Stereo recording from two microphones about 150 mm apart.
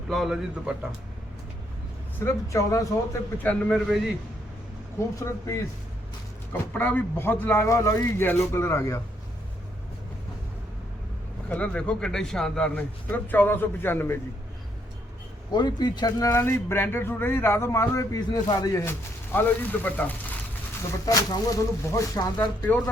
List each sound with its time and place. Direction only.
0.1 s a man's voice: centre (ahead or behind)
2.1 s speech: 20° left (ahead or behind); by 4.0 s centre (ahead or behind)
5.2 s speech: 20° left (ahead or behind)
11.4 s speech: 10° left (ahead or behind)
15.5 s speech: 30° left (ahead or behind); by 20.1 s 10° left (ahead or behind)
21.0 s speech: 25° left (ahead or behind)